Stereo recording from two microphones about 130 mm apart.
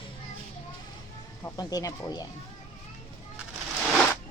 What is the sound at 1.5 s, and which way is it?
Speech, 30° left (ahead or behind).